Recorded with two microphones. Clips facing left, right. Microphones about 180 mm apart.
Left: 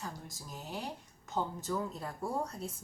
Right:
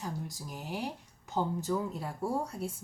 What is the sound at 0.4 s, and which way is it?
A woman's voice, 15° right (ahead or behind).